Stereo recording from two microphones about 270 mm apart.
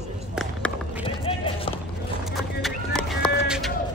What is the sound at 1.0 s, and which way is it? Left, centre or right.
Run, centre.